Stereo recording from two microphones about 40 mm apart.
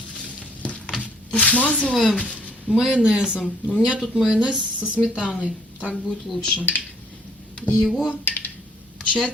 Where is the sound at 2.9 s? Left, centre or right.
Centre.